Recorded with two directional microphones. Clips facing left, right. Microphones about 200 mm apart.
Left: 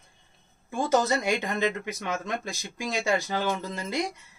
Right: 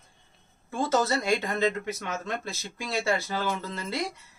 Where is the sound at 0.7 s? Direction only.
15° left (ahead or behind).